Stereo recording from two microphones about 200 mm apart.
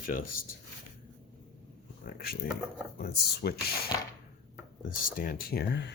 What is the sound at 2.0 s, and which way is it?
Speech, 50° left (ahead or behind).